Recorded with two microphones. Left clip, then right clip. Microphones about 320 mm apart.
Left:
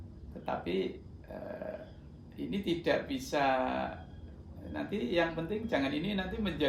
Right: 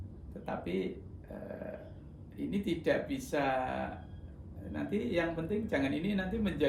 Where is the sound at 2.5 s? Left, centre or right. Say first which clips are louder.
Left 1 dB; centre.